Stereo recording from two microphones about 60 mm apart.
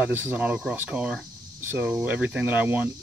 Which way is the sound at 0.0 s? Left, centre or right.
Right.